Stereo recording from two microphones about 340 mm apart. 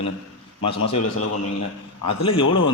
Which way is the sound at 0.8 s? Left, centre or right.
Left.